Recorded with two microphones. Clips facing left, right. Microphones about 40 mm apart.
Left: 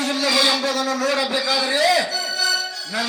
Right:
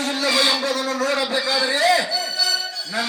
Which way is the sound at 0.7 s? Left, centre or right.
Right.